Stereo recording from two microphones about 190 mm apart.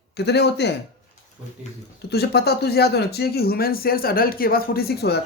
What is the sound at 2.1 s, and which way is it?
Speech, 60° left (ahead or behind).